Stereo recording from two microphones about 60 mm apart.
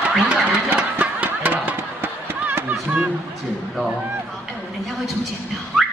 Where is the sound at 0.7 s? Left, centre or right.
Right.